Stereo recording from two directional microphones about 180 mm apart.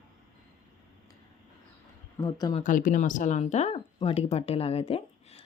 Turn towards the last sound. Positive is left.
turn(degrees=35)  # may be behind; listen again after turning